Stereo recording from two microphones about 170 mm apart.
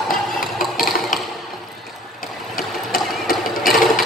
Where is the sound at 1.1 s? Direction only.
50° left (ahead or behind).